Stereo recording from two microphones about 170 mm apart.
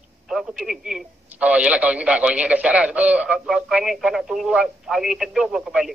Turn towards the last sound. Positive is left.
turn(degrees=0)  # may be behind; listen again after turning